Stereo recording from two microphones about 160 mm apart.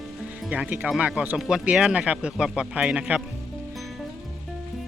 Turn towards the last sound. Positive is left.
turn(degrees=-5)  # may be behind; listen again after turning